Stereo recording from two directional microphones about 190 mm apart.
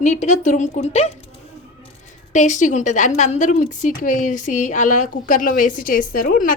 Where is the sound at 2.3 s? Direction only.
40° left (ahead or behind).